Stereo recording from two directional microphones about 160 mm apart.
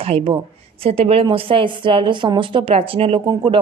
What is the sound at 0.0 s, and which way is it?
A woman's voice, 40° right (ahead or behind).